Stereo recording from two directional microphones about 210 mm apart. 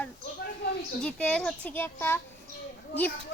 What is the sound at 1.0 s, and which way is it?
A child's voice, 5° left (ahead or behind).